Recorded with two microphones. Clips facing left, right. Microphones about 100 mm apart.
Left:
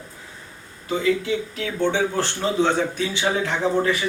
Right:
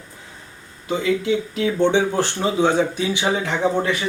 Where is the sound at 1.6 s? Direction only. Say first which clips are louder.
Right 5 dB; 20° right (ahead or behind).